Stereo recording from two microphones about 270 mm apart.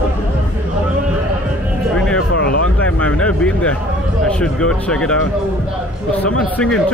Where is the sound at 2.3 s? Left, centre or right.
Left.